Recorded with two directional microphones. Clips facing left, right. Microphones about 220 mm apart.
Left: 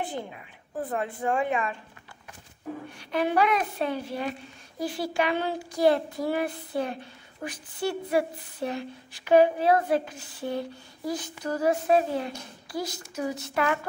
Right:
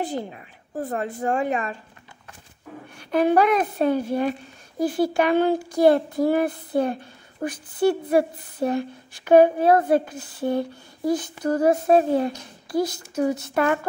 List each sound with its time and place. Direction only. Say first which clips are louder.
0.0 s a woman's voice: right 5 dB; 40° right (ahead or behind)
3.0 s speech: right 6 dB; 50° right (ahead or behind)